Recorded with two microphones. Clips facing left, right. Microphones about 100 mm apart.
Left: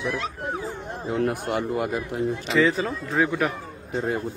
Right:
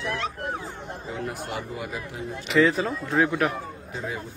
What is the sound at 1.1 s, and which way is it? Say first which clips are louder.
A man's voice: left 8 dB; 55° left (ahead or behind).